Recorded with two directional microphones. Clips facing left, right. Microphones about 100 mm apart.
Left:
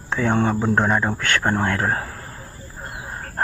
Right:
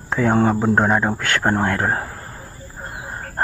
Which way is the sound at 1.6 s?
10° right (ahead or behind).